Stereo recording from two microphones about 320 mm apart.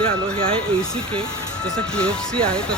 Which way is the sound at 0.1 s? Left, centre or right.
Centre.